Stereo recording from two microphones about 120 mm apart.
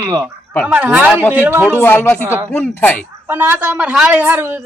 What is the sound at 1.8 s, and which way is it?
A woman's voice, 15° left (ahead or behind).